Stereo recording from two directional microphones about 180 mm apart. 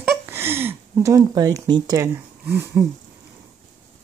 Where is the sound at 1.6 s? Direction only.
25° right (ahead or behind).